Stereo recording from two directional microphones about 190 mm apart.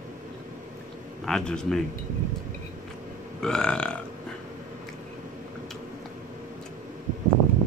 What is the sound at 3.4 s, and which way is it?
Speech, 5° left (ahead or behind).